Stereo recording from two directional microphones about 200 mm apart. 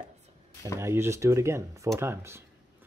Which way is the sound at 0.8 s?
15° right (ahead or behind).